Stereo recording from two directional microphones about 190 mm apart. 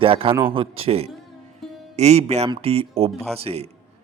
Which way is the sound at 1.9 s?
35° right (ahead or behind).